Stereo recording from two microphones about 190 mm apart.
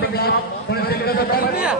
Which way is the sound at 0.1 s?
55° left (ahead or behind).